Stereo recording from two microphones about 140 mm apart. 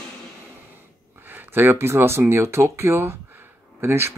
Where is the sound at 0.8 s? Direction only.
15° right (ahead or behind).